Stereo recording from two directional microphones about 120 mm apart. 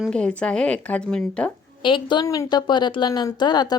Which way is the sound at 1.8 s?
45° left (ahead or behind).